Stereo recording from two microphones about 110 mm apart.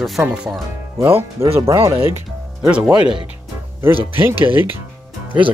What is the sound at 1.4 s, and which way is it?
Speech, 25° right (ahead or behind).